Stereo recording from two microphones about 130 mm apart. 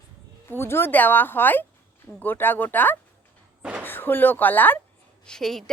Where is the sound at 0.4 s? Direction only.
20° left (ahead or behind).